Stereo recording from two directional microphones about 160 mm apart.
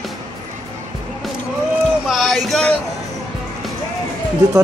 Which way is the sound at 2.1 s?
Centre (ahead or behind).